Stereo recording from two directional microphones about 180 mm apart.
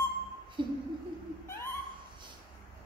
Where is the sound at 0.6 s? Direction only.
25° right (ahead or behind).